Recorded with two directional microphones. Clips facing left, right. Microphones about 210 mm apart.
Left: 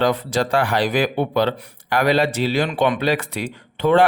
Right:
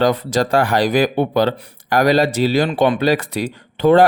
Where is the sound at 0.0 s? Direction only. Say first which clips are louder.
Right 3 dB; 40° right (ahead or behind).